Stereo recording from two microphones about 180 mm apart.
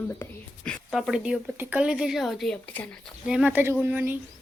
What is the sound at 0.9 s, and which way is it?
A woman's voice, centre (ahead or behind).